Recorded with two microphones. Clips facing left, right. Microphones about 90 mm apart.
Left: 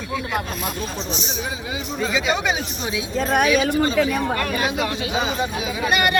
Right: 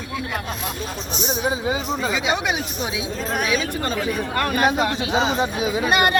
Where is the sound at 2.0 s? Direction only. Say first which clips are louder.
Left 1 dB; 10° right (ahead or behind).